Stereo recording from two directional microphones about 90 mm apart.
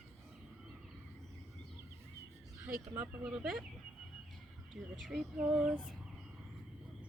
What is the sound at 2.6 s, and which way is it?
Speech, 20° right (ahead or behind).